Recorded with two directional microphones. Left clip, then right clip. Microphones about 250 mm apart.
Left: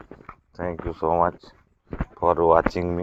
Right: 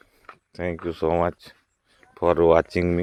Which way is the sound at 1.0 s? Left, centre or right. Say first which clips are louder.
Left 2 dB; right.